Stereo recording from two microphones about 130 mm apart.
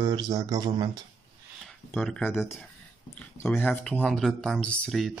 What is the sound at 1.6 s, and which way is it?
Speech, 5° left (ahead or behind).